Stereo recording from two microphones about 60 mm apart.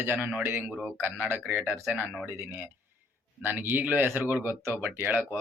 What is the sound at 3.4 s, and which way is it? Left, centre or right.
A man's voice, right.